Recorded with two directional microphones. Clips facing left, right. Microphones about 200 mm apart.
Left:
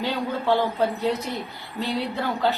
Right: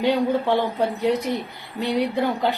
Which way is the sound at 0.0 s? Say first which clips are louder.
Right 6 dB; 15° right (ahead or behind).